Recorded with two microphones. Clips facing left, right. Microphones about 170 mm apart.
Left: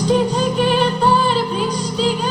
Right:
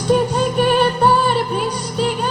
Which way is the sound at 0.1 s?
60° right (ahead or behind).